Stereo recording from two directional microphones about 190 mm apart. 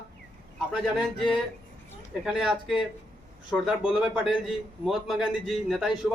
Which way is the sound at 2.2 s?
Centre (ahead or behind).